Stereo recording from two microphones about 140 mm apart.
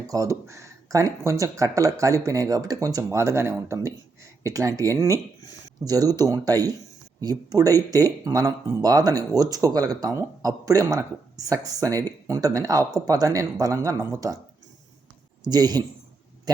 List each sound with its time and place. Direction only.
0.1 s speech: 20° right (ahead or behind)
15.4 s speech: 30° right (ahead or behind)